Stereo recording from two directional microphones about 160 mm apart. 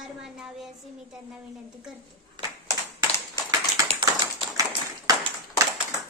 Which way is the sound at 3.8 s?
30° right (ahead or behind).